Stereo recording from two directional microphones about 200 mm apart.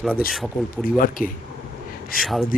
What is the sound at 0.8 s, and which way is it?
Speech, 45° left (ahead or behind).